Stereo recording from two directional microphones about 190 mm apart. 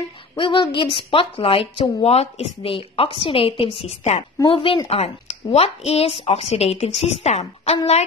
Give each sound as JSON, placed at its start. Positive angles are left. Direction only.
{"t": 0.4, "sound": "a woman's voice", "side_deg": 25}